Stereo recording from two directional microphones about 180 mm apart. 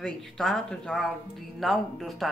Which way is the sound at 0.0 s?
Centre (ahead or behind).